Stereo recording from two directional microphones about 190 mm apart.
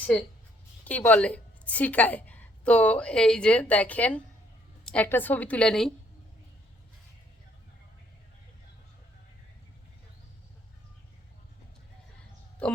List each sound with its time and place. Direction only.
0.0 s a woman's voice: 10° left (ahead or behind)